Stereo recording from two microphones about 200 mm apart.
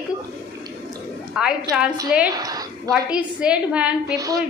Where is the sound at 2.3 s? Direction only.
20° right (ahead or behind).